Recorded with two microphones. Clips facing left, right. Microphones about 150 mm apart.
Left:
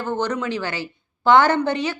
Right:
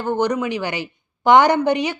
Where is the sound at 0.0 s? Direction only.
15° right (ahead or behind).